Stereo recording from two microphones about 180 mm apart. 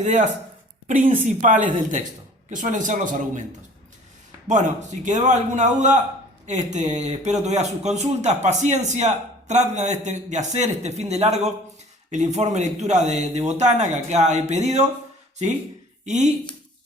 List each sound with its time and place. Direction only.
0.0 s a man's voice: 45° right (ahead or behind)
4.4 s a man's voice: 45° right (ahead or behind)
16.0 s a man's voice: 40° right (ahead or behind)